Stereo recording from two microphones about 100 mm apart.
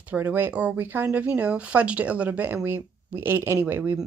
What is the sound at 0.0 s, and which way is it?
Speech, 15° right (ahead or behind).